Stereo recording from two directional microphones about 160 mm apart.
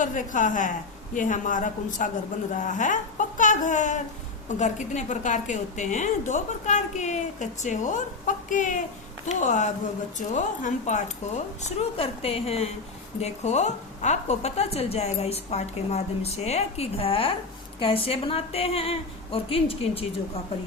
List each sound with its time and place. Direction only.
0.0 s a woman's voice: 55° left (ahead or behind); by 20.1 s 35° left (ahead or behind)